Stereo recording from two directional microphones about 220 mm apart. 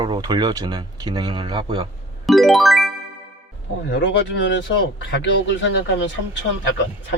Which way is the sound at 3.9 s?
55° left (ahead or behind).